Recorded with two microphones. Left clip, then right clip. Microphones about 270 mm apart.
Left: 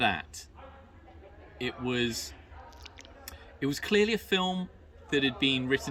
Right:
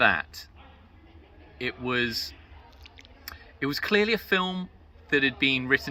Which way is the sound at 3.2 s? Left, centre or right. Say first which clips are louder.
Right 3 dB; centre.